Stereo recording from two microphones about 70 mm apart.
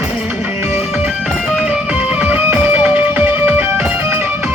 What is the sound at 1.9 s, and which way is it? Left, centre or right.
Music, centre.